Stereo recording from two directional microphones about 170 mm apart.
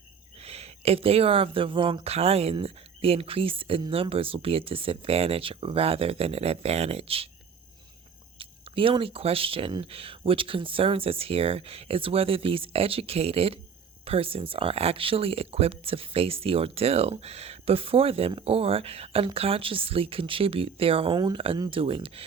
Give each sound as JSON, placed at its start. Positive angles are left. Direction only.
{"t": 0.4, "sound": "speech", "side_deg": -35}
{"t": 8.4, "sound": "speech", "side_deg": -30}